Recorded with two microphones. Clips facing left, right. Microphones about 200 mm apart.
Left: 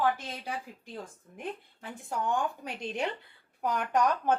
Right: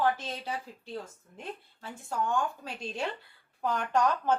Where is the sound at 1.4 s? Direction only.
15° left (ahead or behind).